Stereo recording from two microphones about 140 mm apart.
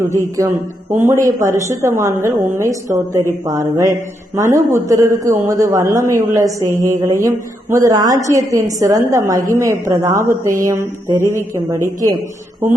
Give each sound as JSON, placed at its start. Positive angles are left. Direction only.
{"t": 0.3, "sound": "speech", "side_deg": -20}